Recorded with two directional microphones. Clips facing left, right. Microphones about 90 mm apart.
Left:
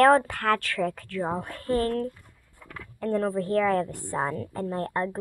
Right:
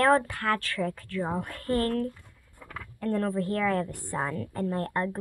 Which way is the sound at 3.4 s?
30° left (ahead or behind).